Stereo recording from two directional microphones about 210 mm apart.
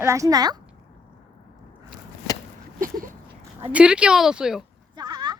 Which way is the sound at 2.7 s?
40° right (ahead or behind).